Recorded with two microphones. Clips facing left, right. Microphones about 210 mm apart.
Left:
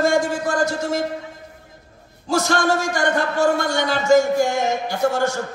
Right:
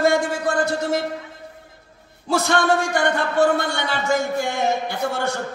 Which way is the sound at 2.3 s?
60° right (ahead or behind).